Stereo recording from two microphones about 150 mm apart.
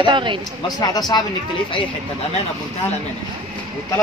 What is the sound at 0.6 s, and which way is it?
Speech, 25° left (ahead or behind).